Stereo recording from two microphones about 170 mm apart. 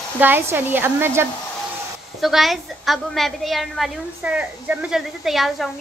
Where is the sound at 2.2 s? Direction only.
Centre (ahead or behind).